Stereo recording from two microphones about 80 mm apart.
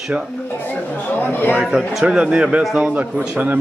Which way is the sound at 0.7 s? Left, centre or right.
Left.